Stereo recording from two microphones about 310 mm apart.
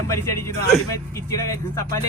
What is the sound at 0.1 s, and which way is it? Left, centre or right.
Speech, centre.